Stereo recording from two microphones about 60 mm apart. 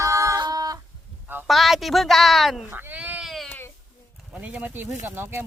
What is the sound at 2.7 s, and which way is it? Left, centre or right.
Speech, right.